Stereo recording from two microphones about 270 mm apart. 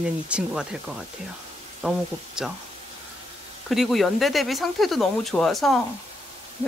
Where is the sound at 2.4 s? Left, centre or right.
Centre.